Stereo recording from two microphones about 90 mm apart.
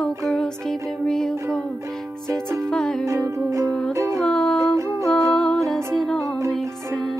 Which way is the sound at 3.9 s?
35° right (ahead or behind).